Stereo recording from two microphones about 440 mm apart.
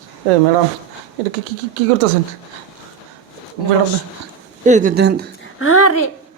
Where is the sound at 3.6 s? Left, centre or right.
Left.